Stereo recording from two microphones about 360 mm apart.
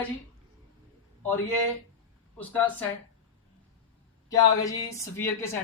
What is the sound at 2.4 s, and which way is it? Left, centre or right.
Speech, centre.